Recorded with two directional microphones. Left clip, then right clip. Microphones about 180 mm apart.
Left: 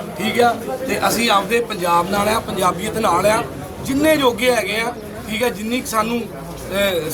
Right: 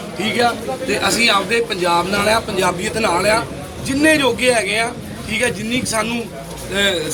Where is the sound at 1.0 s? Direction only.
15° left (ahead or behind).